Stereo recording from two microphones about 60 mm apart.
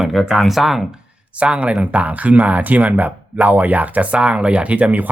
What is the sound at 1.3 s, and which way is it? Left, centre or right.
Speech, right.